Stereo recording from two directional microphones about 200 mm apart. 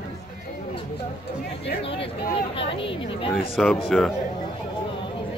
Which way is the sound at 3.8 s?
Centre (ahead or behind).